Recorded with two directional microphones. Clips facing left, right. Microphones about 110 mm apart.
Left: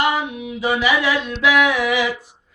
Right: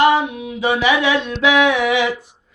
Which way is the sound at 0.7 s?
25° right (ahead or behind).